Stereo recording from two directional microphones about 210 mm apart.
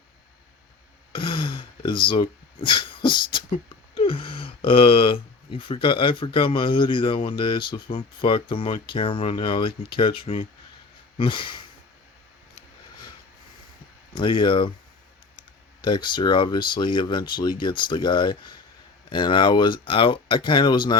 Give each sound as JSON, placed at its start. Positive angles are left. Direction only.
{"t": 1.1, "sound": "speech", "side_deg": 25}
{"t": 14.2, "sound": "speech", "side_deg": 25}